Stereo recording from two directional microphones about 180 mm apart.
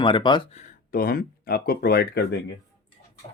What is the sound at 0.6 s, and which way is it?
Speech, 55° left (ahead or behind).